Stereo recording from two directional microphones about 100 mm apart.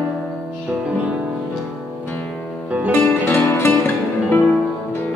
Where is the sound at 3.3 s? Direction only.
20° left (ahead or behind).